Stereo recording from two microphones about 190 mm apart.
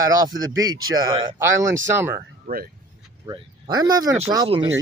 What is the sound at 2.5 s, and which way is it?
Speech, 50° right (ahead or behind).